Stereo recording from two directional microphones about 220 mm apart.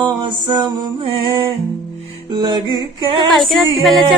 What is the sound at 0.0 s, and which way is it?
Music, 20° right (ahead or behind).